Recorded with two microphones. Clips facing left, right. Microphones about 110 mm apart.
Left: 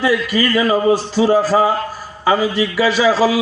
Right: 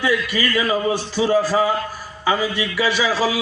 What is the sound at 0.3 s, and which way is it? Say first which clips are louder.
A man's voice: left 5 dB; 40° left (ahead or behind).